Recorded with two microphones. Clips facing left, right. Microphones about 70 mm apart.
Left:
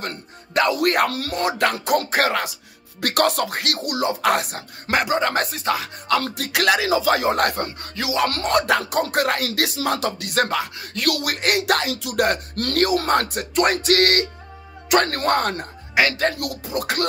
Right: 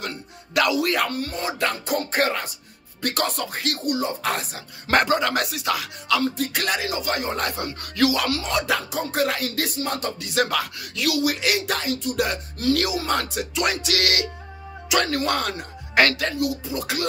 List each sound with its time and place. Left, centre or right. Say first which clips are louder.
0.7 s speech: left 3 dB; left
4.9 s speech: even; left
6.2 s speech: left 4 dB; left
7.6 s speech: right 6 dB; left
8.3 s music: left 4 dB; left
9.0 s speech: left 2 dB; left
10.5 s speech: left 1 dB; left
11.0 s speech: right 1 dB; left
12.2 s music: left 4 dB; left
16.0 s a woman's voice: right 1 dB; centre
16.3 s speech: right 1 dB; left